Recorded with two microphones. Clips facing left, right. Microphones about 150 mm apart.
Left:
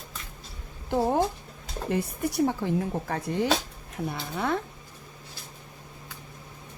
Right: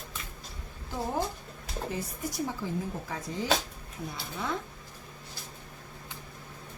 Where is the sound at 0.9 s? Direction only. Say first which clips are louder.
Left 8 dB; 60° left (ahead or behind).